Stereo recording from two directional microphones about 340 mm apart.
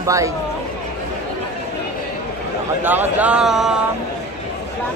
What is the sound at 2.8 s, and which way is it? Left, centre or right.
Speech, centre.